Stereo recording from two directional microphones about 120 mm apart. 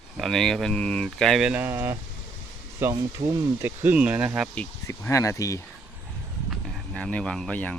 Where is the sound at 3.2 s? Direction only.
75° right (ahead or behind).